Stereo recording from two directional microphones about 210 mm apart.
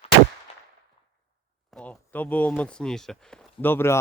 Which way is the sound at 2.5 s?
5° left (ahead or behind).